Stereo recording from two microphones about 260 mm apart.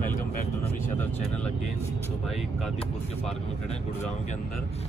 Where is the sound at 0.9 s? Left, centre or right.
Centre.